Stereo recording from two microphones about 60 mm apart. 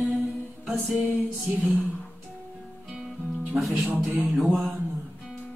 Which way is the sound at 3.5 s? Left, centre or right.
Centre.